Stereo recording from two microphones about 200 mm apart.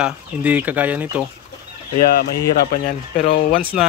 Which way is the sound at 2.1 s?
50° left (ahead or behind).